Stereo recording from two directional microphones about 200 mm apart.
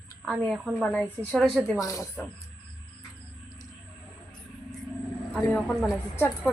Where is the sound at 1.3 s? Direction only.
5° right (ahead or behind).